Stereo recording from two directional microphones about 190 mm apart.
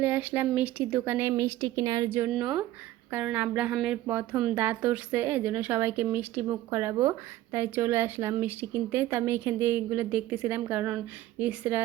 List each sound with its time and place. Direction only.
0.0 s speech: 10° right (ahead or behind)